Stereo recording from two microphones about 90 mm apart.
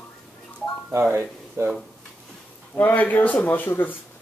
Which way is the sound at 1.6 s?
30° right (ahead or behind).